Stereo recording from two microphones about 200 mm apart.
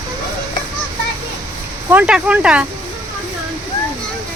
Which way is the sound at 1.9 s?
5° right (ahead or behind).